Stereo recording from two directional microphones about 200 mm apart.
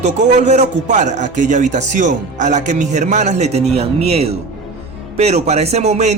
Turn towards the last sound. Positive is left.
turn(degrees=-35)  # may be behind; listen again after turning